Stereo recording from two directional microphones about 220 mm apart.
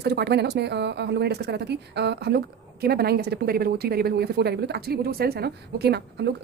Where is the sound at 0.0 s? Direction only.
45° right (ahead or behind).